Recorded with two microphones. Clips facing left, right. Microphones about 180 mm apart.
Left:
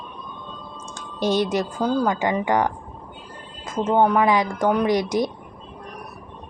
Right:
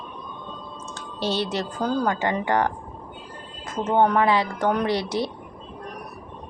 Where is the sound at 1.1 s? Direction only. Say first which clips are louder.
Left 5 dB; 15° left (ahead or behind).